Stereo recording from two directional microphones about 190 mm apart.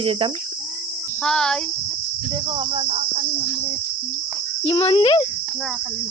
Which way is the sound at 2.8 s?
35° right (ahead or behind).